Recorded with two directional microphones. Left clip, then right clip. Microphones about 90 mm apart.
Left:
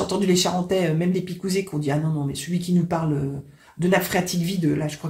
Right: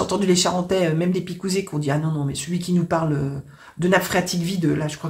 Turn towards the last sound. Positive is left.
turn(degrees=-20)  # may be behind; listen again after turning